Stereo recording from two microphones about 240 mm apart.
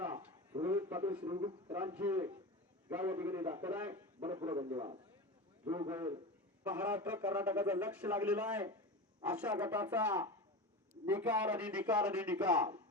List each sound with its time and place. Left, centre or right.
0.1 s a sound: centre
1.2 s a man's voice: centre
1.7 s a man's voice: centre
6.7 s a man's voice: centre